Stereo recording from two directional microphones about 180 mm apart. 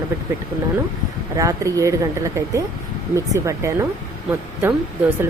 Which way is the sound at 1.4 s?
20° right (ahead or behind).